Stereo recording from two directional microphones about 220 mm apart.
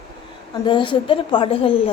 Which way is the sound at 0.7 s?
20° left (ahead or behind).